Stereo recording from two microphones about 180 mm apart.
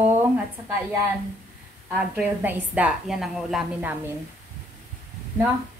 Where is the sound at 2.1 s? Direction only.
10° right (ahead or behind).